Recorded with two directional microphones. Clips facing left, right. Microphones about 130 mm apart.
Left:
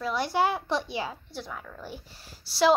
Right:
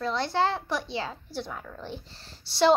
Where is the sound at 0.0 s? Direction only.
10° left (ahead or behind).